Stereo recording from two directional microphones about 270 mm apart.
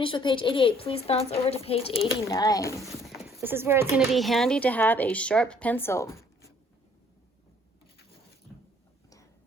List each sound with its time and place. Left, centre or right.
0.0 s a woman's voice: centre
2.8 s clip-clop: centre
3.3 s speech: centre